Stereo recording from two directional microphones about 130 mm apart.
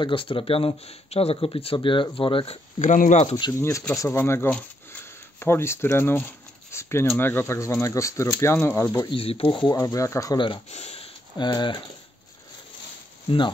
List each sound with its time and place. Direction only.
0.0 s speech: 40° left (ahead or behind)
2.8 s speech: 70° left (ahead or behind)
3.5 s speech: 25° left (ahead or behind)
9.1 s speech: 45° left (ahead or behind)
9.7 s speech: 30° left (ahead or behind)
10.3 s speech: 40° left (ahead or behind)
10.7 s speech: 55° left (ahead or behind)
11.3 s speech: 35° left (ahead or behind)